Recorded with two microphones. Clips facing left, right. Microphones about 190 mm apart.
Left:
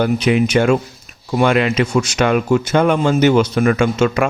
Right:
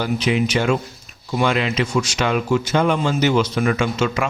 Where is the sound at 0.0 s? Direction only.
55° left (ahead or behind).